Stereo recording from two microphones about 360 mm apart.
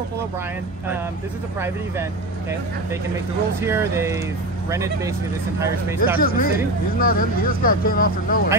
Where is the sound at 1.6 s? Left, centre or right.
Centre.